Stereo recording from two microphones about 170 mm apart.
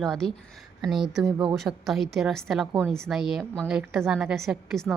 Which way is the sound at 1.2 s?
20° right (ahead or behind).